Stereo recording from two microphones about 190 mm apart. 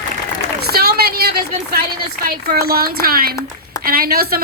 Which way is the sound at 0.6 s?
55° right (ahead or behind).